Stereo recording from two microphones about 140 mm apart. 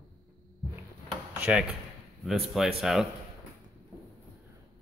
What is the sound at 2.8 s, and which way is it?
Speech, centre (ahead or behind).